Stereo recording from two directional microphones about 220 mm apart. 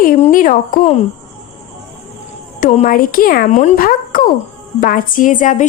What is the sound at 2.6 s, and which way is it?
A woman's voice, 35° left (ahead or behind).